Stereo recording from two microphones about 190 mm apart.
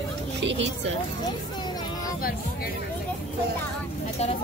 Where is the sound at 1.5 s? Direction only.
20° left (ahead or behind).